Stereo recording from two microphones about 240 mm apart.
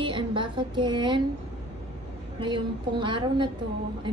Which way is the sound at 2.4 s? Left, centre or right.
Centre.